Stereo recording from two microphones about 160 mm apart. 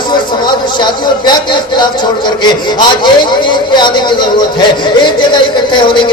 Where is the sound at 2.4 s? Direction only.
25° left (ahead or behind).